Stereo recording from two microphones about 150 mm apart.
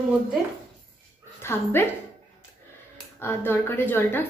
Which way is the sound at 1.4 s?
15° left (ahead or behind).